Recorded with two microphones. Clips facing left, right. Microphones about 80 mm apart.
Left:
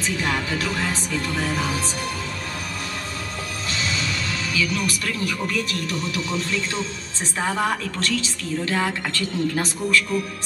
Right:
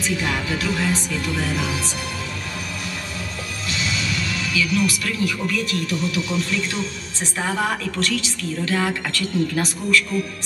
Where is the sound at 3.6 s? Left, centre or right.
Left.